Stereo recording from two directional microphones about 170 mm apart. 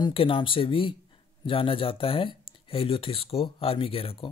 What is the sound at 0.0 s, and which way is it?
Speech, 30° left (ahead or behind).